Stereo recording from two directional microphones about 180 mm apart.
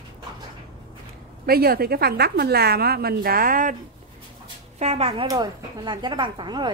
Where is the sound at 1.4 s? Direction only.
60° right (ahead or behind).